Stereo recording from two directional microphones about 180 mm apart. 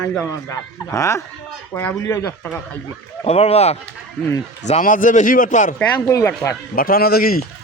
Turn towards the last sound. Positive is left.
turn(degrees=55)  # may be behind; listen again after turning